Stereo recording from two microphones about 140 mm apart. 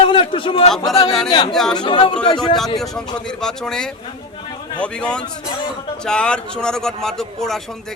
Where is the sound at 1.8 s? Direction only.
35° left (ahead or behind).